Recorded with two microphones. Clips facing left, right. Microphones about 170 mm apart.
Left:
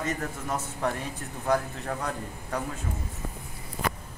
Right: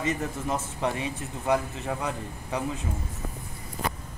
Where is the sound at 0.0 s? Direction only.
10° right (ahead or behind).